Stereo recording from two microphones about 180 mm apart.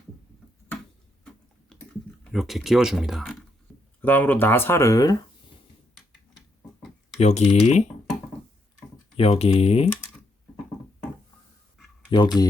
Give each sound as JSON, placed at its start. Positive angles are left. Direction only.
{"t": 1.7, "sound": "typing", "side_deg": 5}
{"t": 2.3, "sound": "speech", "side_deg": 0}
{"t": 4.0, "sound": "speech", "side_deg": 10}
{"t": 7.2, "sound": "speech", "side_deg": 40}
{"t": 9.1, "sound": "speech", "side_deg": 35}
{"t": 12.1, "sound": "speech", "side_deg": 25}